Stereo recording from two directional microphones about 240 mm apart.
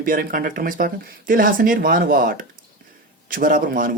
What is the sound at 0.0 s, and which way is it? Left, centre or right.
Speech, right.